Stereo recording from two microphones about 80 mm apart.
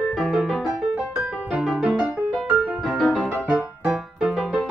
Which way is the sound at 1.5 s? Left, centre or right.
Centre.